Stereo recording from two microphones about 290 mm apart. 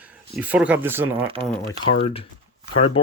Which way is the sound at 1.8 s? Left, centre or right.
Centre.